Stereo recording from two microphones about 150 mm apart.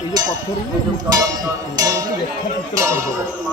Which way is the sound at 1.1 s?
25° right (ahead or behind).